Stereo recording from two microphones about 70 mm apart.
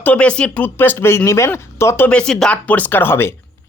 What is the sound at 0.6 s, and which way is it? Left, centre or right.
Speech, left.